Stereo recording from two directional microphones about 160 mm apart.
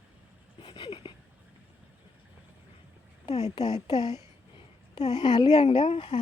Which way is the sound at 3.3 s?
45° left (ahead or behind).